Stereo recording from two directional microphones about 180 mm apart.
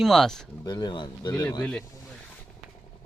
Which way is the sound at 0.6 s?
25° left (ahead or behind).